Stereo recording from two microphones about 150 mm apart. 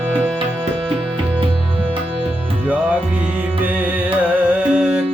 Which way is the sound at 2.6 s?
10° right (ahead or behind).